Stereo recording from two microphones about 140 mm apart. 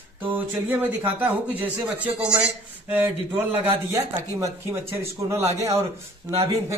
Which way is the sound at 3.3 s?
20° right (ahead or behind).